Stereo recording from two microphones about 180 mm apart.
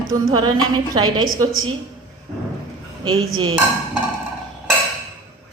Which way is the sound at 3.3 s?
25° right (ahead or behind).